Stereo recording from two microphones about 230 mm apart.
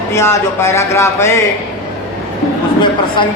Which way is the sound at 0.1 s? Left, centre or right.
Centre.